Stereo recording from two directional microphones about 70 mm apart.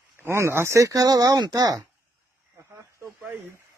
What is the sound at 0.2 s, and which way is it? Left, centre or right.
Speech, right.